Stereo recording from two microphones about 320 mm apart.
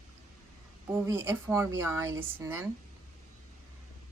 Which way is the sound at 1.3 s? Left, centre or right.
Centre.